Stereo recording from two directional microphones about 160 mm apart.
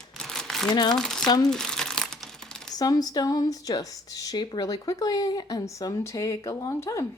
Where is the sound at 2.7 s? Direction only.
25° left (ahead or behind).